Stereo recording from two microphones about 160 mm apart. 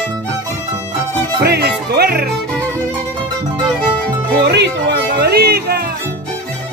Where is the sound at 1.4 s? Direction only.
90° right.